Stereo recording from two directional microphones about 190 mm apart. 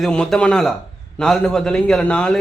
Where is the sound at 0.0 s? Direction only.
5° left (ahead or behind).